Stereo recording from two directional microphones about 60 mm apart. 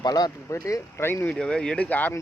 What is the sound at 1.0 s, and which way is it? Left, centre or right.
Speech, left.